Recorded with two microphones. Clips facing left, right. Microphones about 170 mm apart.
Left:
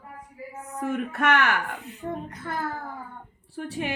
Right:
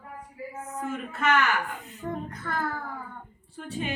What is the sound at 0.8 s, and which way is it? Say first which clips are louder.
Speech: left 5 dB; 65° left (ahead or behind).